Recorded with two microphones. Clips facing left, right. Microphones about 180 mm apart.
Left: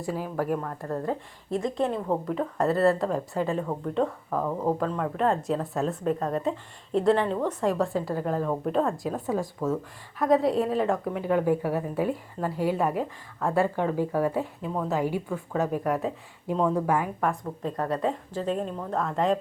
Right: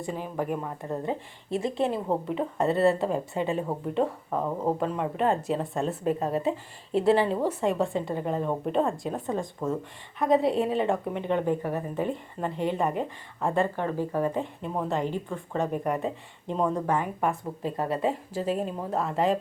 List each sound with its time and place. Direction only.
0.0 s speech: 5° left (ahead or behind)
0.8 s speech: 20° right (ahead or behind)
1.9 s speech: centre (ahead or behind)
3.6 s a woman's voice: 15° right (ahead or behind); by 17.1 s 5° left (ahead or behind)
17.2 s speech: 5° right (ahead or behind)